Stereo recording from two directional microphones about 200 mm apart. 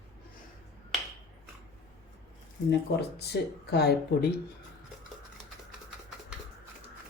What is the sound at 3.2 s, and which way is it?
Speech, 55° left (ahead or behind).